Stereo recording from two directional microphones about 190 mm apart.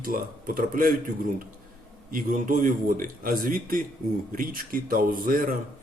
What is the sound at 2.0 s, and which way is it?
Speech, 45° right (ahead or behind).